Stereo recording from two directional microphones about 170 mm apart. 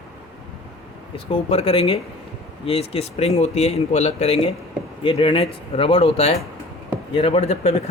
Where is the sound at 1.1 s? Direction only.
35° left (ahead or behind).